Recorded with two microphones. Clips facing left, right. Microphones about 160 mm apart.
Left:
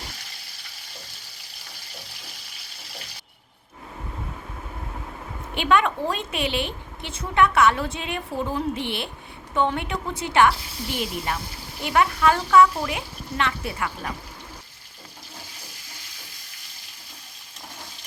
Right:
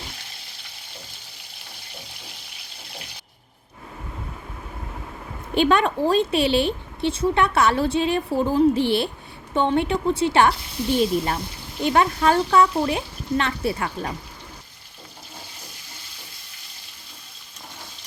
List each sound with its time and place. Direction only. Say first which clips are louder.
5.5 s a woman's voice: right 3 dB; 35° right (ahead or behind)